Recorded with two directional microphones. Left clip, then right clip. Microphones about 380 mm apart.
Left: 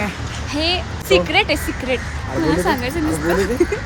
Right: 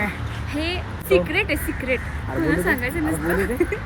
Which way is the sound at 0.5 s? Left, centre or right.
Centre.